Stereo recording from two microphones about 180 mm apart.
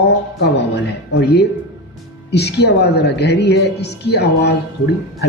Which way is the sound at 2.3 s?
65° left (ahead or behind).